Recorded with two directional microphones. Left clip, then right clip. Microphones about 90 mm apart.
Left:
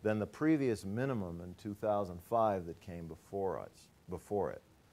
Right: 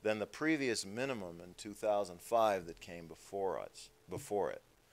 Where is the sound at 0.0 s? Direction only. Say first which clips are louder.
Left 1 dB; 20° left (ahead or behind).